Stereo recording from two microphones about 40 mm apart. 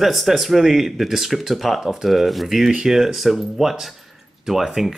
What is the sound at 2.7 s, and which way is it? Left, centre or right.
Speech, centre.